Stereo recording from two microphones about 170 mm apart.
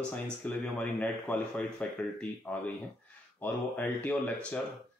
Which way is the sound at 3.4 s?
10° left (ahead or behind).